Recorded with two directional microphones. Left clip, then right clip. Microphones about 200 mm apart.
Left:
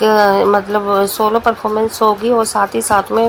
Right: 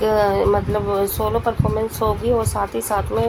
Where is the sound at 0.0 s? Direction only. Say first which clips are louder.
Left 6 dB; 20° left (ahead or behind).